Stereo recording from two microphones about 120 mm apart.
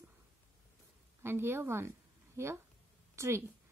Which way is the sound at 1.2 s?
20° right (ahead or behind).